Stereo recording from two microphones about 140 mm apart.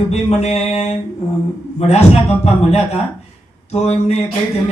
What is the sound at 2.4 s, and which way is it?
A man's voice, 50° left (ahead or behind).